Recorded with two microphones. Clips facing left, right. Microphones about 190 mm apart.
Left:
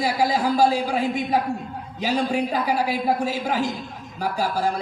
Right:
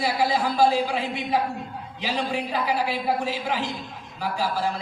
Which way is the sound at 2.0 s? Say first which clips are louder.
Left 5 dB; 45° left (ahead or behind).